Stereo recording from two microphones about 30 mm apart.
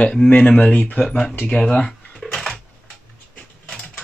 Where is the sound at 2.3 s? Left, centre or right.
Centre.